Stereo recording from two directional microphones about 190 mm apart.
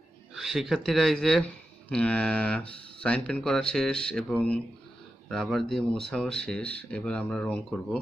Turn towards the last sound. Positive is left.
turn(degrees=5)  # may be behind; listen again after turning